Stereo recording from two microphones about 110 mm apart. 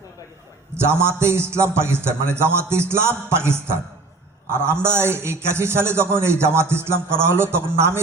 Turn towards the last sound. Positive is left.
turn(degrees=-20)  # may be behind; listen again after turning